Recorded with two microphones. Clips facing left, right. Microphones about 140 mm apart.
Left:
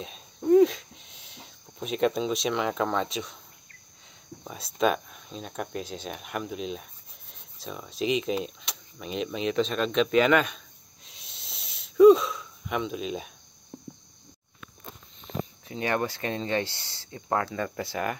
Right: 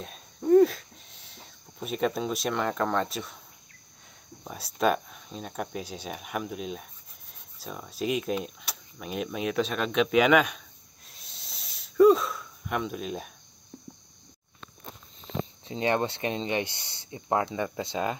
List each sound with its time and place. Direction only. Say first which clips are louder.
0.0 s a sound: left 1 dB; centre (ahead or behind)
4.7 s speech: even; centre (ahead or behind)
11.1 s wheeze: left 1 dB; centre (ahead or behind)
15.6 s speech: right 2 dB; 25° right (ahead or behind)